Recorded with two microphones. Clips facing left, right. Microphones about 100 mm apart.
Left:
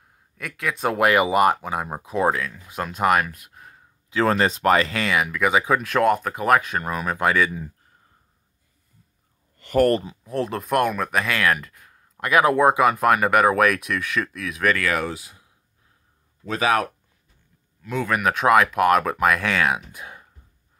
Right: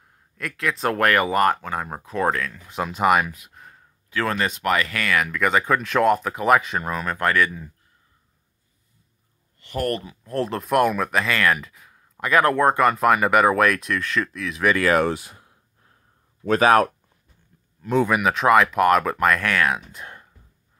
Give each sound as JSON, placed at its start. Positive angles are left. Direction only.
{"t": 0.0, "sound": "speech", "side_deg": 0}
{"t": 4.1, "sound": "speech", "side_deg": 25}
{"t": 5.2, "sound": "speech", "side_deg": 5}
{"t": 9.6, "sound": "a sound", "side_deg": 45}
{"t": 9.8, "sound": "speech", "side_deg": 30}
{"t": 10.2, "sound": "speech", "side_deg": 0}
{"t": 14.8, "sound": "speech", "side_deg": -40}
{"t": 18.0, "sound": "speech", "side_deg": -5}